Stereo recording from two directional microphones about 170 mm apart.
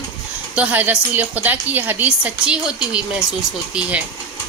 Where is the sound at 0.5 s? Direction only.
10° right (ahead or behind).